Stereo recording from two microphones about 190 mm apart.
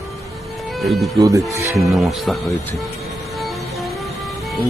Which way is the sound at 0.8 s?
Centre (ahead or behind).